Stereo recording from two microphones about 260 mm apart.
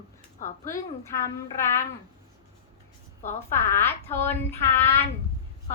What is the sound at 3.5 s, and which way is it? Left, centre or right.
A woman's voice, centre.